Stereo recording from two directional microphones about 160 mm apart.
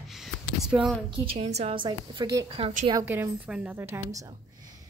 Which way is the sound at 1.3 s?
40° right (ahead or behind).